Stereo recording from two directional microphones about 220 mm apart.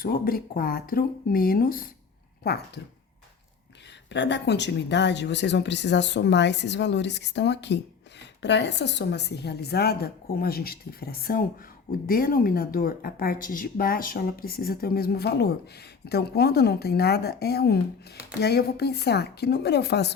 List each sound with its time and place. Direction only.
0.0 s speech: 40° left (ahead or behind)
4.1 s a woman's voice: 55° left (ahead or behind)